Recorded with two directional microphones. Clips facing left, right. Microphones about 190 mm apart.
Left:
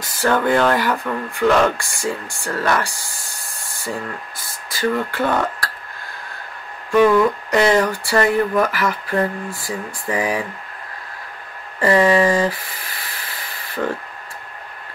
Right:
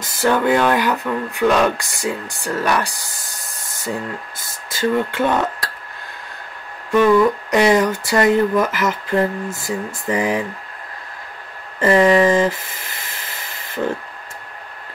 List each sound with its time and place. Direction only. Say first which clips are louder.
0.0 s speech: right 1 dB; 15° right (ahead or behind)
4.4 s speech: right 1 dB; 20° right (ahead or behind)
7.5 s speech: right 1 dB; 15° right (ahead or behind)
11.8 s a sound: right 2 dB; 20° right (ahead or behind)
13.8 s speech: right 1 dB; 10° right (ahead or behind)